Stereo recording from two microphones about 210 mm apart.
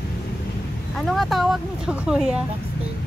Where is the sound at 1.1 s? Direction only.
Centre (ahead or behind).